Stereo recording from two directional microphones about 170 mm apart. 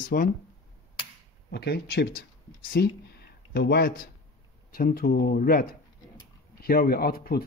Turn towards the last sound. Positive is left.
turn(degrees=65)  # may be behind; listen again after turning